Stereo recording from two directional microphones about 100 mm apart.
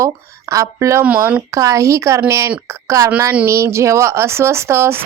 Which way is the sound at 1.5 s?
30° right (ahead or behind).